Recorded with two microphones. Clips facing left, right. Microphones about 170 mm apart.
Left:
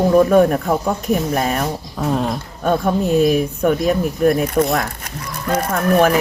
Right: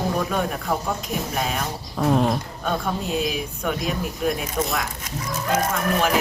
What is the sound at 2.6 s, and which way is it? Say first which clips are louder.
Speech: left 12 dB; 50° left (ahead or behind).